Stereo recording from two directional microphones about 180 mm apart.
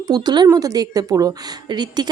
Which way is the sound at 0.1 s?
25° right (ahead or behind).